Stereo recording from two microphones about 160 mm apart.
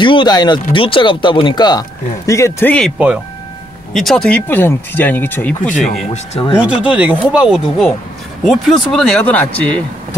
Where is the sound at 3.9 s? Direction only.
Centre (ahead or behind).